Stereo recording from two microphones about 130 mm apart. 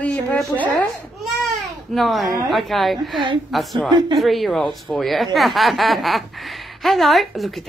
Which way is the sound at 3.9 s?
35° right (ahead or behind).